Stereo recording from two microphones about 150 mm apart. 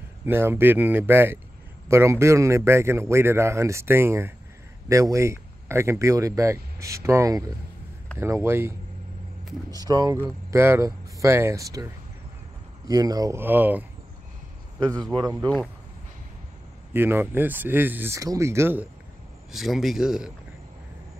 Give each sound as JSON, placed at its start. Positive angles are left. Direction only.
{"t": 0.2, "sound": "a man's voice", "side_deg": -15}
{"t": 9.8, "sound": "speech", "side_deg": -25}
{"t": 14.8, "sound": "speech", "side_deg": -25}
{"t": 16.9, "sound": "a man's voice", "side_deg": -15}
{"t": 19.5, "sound": "speech", "side_deg": 0}